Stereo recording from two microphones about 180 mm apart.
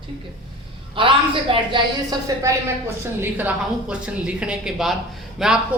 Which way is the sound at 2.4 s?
15° right (ahead or behind).